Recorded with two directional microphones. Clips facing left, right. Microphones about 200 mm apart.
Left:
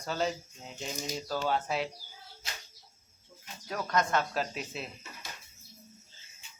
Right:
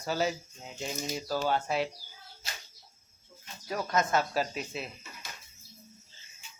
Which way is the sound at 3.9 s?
5° right (ahead or behind).